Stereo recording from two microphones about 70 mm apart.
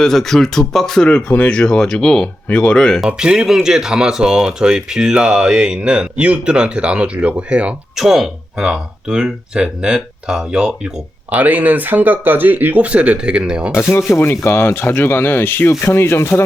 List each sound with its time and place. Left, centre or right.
0.0 s speech: centre
1.0 s speech: centre
3.1 s speech: centre
7.9 s speech: centre
11.3 s speech: right
13.9 s speech: left